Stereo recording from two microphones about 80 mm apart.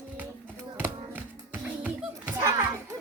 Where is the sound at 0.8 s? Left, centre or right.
Right.